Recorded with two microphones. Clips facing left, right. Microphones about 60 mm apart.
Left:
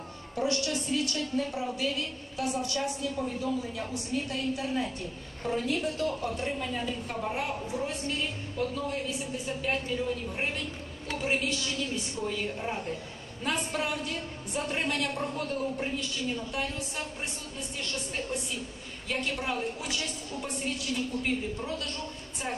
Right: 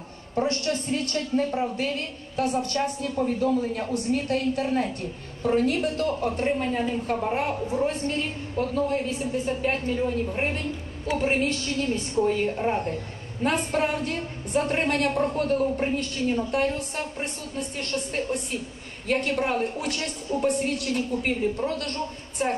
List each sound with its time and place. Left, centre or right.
0.4 s a woman's voice: right